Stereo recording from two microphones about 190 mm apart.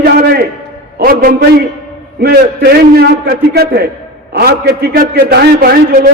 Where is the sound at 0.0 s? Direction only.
55° right (ahead or behind).